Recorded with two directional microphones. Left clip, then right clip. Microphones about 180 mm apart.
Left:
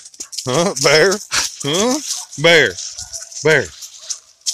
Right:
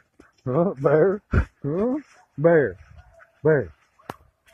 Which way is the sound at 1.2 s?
25° left (ahead or behind).